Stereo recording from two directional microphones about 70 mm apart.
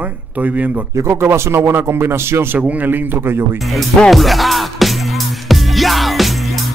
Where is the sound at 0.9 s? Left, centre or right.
Right.